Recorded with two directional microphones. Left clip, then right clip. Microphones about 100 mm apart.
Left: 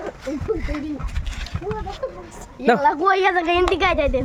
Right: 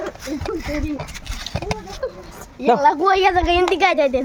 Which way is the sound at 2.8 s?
35° right (ahead or behind).